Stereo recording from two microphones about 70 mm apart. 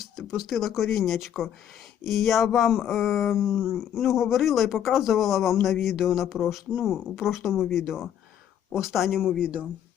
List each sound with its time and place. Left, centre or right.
0.0 s speech: centre
9.4 s speech: centre